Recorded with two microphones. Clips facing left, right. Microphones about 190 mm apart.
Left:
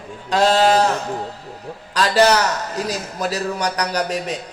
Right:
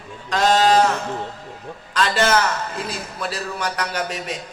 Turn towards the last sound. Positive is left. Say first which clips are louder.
# left 4 dB
turn(degrees=40)  # may be behind; listen again after turning